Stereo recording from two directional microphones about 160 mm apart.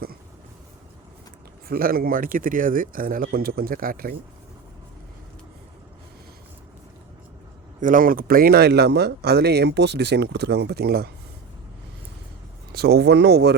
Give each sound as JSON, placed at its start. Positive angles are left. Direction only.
{"t": 1.6, "sound": "speech", "side_deg": -70}
{"t": 7.8, "sound": "speech", "side_deg": -55}
{"t": 12.7, "sound": "speech", "side_deg": -90}